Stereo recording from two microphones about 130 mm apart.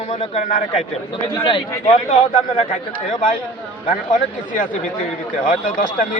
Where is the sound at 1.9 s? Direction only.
55° left (ahead or behind).